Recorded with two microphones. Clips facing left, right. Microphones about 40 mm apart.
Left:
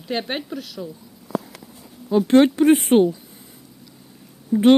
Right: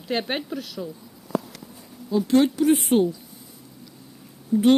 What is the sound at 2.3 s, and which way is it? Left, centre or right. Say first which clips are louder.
Speech: left 4 dB; left.